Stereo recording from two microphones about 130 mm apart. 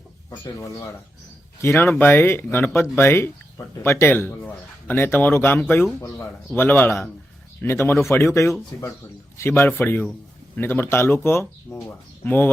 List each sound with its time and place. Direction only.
0.3 s speech: 25° left (ahead or behind)